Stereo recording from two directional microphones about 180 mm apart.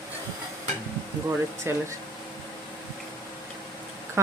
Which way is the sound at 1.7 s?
15° right (ahead or behind).